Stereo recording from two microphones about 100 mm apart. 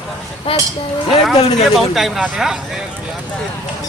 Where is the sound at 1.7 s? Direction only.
Centre (ahead or behind).